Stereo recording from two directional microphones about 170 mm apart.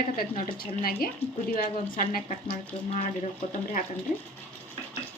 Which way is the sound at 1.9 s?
55° left (ahead or behind).